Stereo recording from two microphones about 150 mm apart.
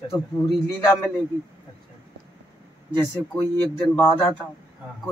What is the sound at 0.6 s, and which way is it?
Speech, 15° left (ahead or behind).